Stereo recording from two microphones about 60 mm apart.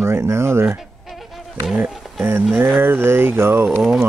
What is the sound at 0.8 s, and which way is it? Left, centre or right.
Insect, centre.